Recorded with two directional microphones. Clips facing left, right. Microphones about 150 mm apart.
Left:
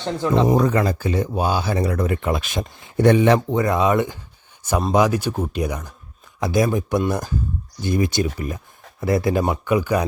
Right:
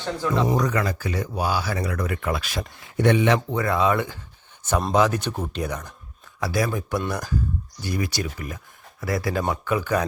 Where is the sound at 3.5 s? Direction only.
20° left (ahead or behind).